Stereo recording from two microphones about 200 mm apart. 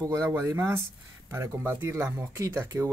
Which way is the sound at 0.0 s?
15° right (ahead or behind).